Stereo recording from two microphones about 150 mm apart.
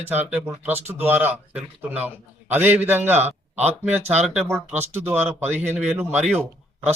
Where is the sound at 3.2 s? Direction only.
45° right (ahead or behind).